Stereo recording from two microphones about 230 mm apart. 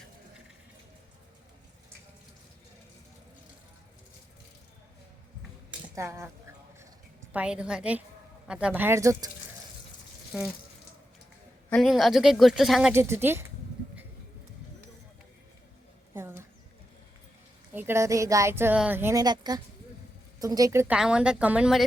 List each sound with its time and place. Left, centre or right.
5.9 s speech: centre
7.3 s a woman's voice: centre
11.7 s a woman's voice: centre
16.1 s a sound: centre
17.7 s a woman's voice: centre